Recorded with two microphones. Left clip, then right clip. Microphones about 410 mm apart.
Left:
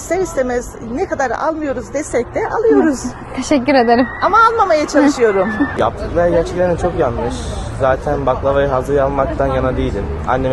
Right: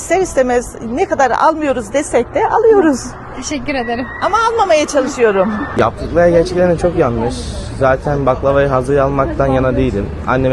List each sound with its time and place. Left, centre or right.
0.1 s a woman's voice: right
3.5 s speech: centre
4.2 s a woman's voice: right
5.8 s a woman's voice: right